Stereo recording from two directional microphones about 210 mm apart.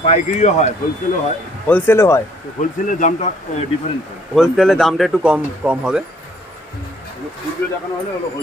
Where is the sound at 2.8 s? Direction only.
35° left (ahead or behind).